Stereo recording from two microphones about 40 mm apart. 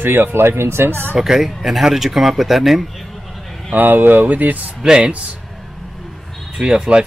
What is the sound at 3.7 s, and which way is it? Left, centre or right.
Speech, right.